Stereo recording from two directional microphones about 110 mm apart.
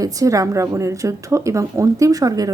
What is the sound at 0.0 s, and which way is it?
A woman's voice, 30° right (ahead or behind).